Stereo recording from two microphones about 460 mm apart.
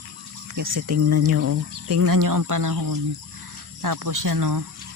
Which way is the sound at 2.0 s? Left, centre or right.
Right.